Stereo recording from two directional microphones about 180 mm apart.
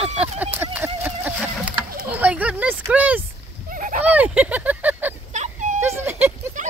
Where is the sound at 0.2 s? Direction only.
10° right (ahead or behind).